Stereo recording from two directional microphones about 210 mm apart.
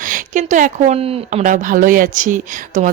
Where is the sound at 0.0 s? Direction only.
40° right (ahead or behind).